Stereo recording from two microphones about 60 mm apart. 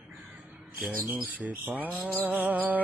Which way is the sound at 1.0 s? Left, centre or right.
Right.